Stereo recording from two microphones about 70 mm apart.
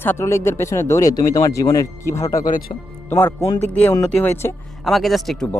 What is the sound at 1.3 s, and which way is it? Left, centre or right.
Speech, left.